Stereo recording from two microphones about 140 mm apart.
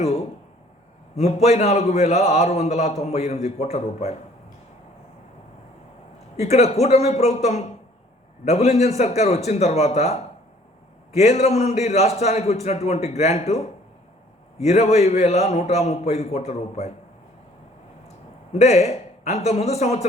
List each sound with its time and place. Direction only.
1.1 s a man's voice: 50° left (ahead or behind)
6.3 s a man's voice: 50° left (ahead or behind)
18.5 s a man's voice: 50° left (ahead or behind)